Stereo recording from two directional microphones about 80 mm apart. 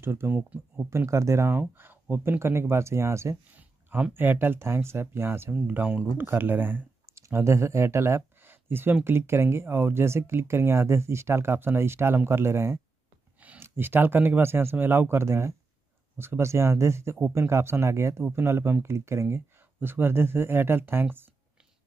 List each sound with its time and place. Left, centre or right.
0.0 s speech: right
0.4 s speech: centre
0.8 s speech: right
3.5 s speech: right
7.2 s speech: right